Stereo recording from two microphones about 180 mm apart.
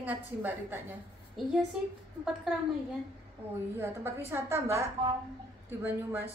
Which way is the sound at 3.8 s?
15° right (ahead or behind).